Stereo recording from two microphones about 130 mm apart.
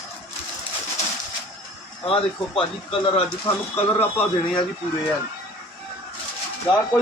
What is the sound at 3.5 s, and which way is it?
Speech, 20° left (ahead or behind).